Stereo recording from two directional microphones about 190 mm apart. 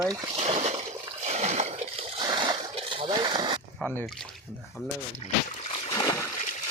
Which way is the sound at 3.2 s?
25° right (ahead or behind).